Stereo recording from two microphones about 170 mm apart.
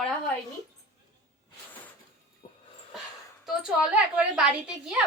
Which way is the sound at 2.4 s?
35° left (ahead or behind).